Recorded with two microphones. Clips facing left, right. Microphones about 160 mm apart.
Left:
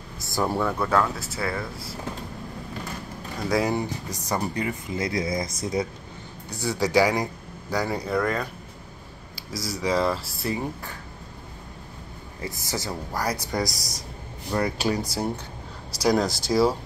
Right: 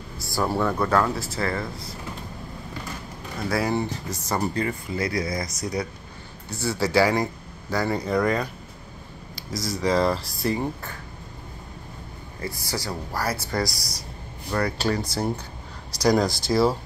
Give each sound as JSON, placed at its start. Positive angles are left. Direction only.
{"t": 0.2, "sound": "speech", "side_deg": 20}
{"t": 0.6, "sound": "speech", "side_deg": 5}
{"t": 3.4, "sound": "speech", "side_deg": 15}
{"t": 9.3, "sound": "speech", "side_deg": 5}
{"t": 12.4, "sound": "speech", "side_deg": 20}
{"t": 16.0, "sound": "speech", "side_deg": 5}